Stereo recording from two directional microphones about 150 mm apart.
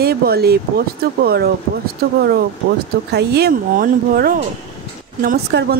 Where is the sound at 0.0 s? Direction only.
90° right.